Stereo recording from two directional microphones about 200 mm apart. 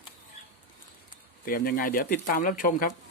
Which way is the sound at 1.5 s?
45° left (ahead or behind).